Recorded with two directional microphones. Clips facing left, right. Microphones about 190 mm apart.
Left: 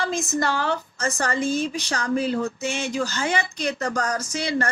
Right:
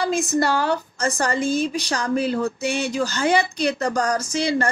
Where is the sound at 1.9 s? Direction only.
35° right (ahead or behind).